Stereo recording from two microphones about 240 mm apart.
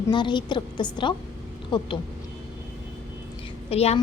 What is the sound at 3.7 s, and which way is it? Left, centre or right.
Speech, left.